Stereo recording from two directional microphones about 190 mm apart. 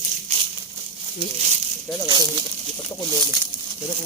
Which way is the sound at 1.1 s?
35° right (ahead or behind).